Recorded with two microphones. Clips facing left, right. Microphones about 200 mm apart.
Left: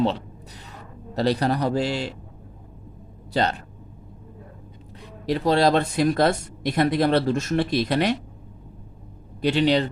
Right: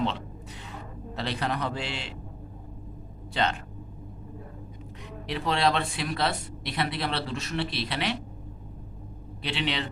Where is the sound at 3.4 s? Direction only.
40° left (ahead or behind).